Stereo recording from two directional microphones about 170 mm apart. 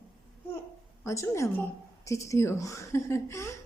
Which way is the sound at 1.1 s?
15° left (ahead or behind).